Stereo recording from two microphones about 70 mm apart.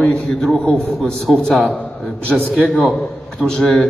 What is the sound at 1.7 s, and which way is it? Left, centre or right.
Speech, centre.